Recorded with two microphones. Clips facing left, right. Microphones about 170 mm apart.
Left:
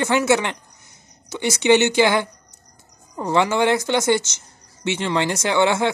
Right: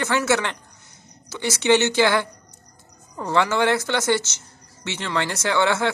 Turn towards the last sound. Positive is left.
turn(degrees=15)  # may be behind; listen again after turning